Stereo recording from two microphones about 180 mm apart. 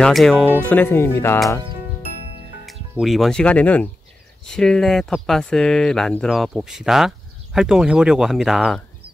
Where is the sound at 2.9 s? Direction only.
Centre (ahead or behind).